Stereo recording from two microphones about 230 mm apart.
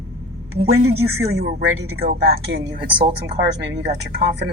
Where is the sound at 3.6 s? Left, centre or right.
Right.